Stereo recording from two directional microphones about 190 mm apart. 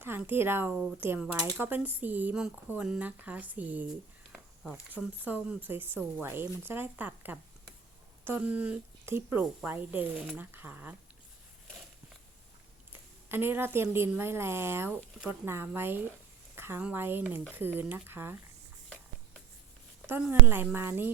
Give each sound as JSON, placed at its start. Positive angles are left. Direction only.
{"t": 0.0, "sound": "speech", "side_deg": -10}
{"t": 4.3, "sound": "a sound", "side_deg": 0}
{"t": 5.2, "sound": "speech", "side_deg": -10}
{"t": 12.9, "sound": "a woman's voice", "side_deg": -10}
{"t": 20.1, "sound": "speech", "side_deg": -10}